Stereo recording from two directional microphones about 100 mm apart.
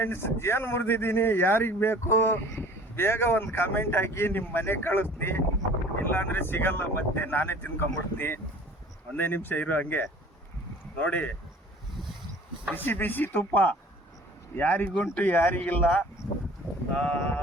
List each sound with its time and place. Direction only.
0.0 s speech: 25° left (ahead or behind)
6.1 s speech: 20° left (ahead or behind)
12.7 s speech: 20° left (ahead or behind)